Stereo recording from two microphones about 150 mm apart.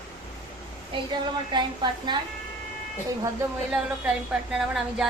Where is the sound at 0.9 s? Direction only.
30° right (ahead or behind).